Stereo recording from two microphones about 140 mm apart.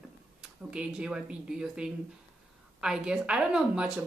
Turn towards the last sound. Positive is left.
turn(degrees=-5)  # may be behind; listen again after turning